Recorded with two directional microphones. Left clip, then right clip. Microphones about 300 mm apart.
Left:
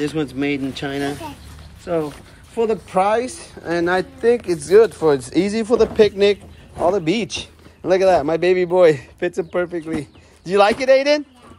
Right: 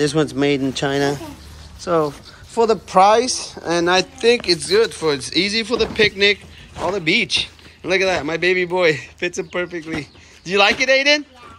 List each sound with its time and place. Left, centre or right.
0.0 s speech: centre
2.9 s speech: centre